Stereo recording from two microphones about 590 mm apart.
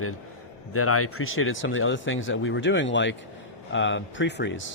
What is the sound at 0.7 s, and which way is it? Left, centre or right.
Speech, left.